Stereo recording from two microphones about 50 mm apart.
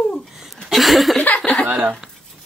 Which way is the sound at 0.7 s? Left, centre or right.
Centre.